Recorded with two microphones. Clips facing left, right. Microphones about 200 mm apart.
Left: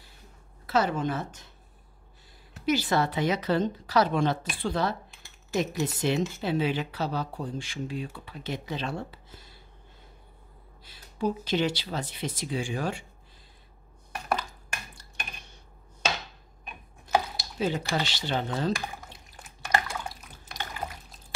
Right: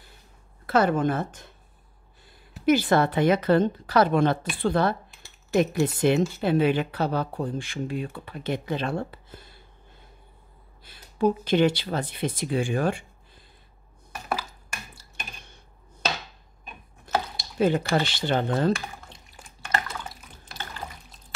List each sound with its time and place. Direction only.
0.7 s speech: 55° right (ahead or behind)
2.6 s speech: 55° right (ahead or behind)
10.8 s speech: 55° right (ahead or behind)
17.1 s a sound: 15° left (ahead or behind)
17.6 s speech: 55° right (ahead or behind)
19.1 s a sound: 10° left (ahead or behind)
20.5 s pour: 10° left (ahead or behind)